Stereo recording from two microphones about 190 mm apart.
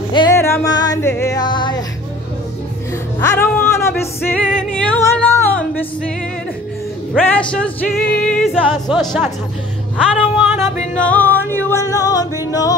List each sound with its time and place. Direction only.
0.1 s music: 20° left (ahead or behind)
3.2 s music: 15° left (ahead or behind)
7.5 s music: 5° left (ahead or behind)
11.0 s music: 10° left (ahead or behind)